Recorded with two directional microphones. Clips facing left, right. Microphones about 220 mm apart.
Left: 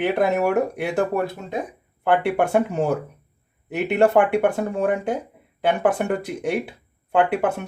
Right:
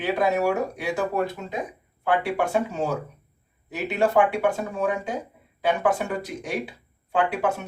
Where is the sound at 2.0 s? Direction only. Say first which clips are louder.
Left 4 dB; 55° left (ahead or behind).